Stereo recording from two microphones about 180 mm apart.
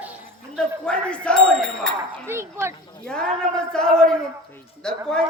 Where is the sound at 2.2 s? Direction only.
15° right (ahead or behind).